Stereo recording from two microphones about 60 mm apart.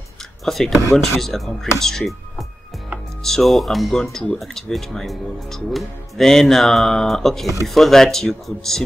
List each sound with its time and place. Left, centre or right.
0.5 s speech: centre